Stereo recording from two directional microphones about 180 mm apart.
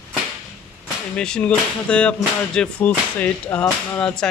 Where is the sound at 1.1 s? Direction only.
5° left (ahead or behind).